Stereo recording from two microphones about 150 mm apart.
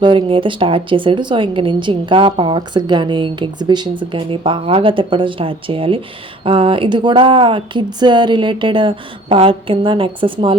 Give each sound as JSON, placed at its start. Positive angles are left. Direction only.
{"t": 0.0, "sound": "speech", "side_deg": -35}